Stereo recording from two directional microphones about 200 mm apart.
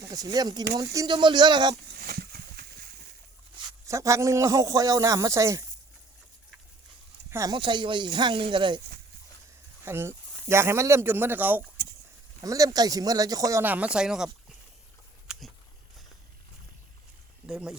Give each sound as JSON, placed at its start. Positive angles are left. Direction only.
{"t": 0.1, "sound": "speech", "side_deg": -20}
{"t": 1.9, "sound": "a sound", "side_deg": -50}
{"t": 3.7, "sound": "a man's voice", "side_deg": -15}
{"t": 7.3, "sound": "speech", "side_deg": -15}
{"t": 9.8, "sound": "a man's voice", "side_deg": -10}
{"t": 15.3, "sound": "a sound", "side_deg": -5}
{"t": 17.4, "sound": "speech", "side_deg": -5}